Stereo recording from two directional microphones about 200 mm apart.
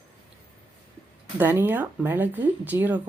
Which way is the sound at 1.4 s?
10° right (ahead or behind).